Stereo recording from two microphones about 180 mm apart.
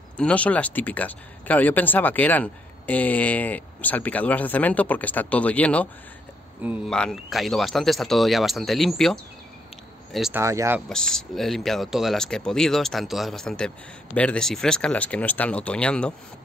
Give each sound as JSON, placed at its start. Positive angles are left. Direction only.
{"t": 0.2, "sound": "speech", "side_deg": 10}
{"t": 6.9, "sound": "speech", "side_deg": 0}
{"t": 10.3, "sound": "speech", "side_deg": -15}
{"t": 10.9, "sound": "speech", "side_deg": 5}